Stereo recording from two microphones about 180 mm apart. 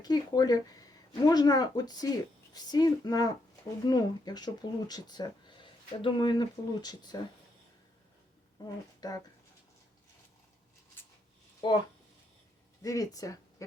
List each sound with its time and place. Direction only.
0.0 s speech: 20° left (ahead or behind)
8.6 s speech: 20° left (ahead or behind)
11.6 s speech: 25° left (ahead or behind)
12.8 s speech: 20° left (ahead or behind)